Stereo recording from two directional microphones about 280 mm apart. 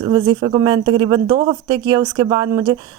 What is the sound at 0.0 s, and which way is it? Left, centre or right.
A woman's voice, centre.